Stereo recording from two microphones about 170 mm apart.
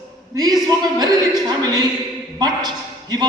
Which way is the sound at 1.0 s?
25° right (ahead or behind).